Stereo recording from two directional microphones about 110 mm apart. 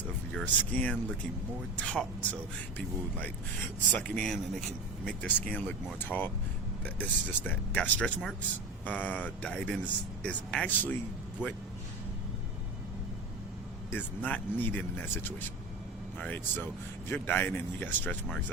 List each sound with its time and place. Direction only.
0.3 s speech: 15° left (ahead or behind)
13.9 s speech: 15° left (ahead or behind)